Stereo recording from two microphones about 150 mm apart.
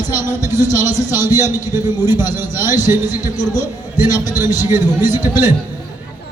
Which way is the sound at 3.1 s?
25° left (ahead or behind).